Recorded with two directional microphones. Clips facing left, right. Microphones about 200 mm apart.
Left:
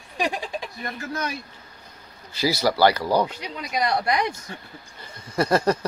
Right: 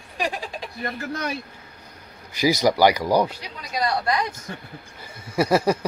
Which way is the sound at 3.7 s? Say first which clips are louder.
Even; 20° left (ahead or behind).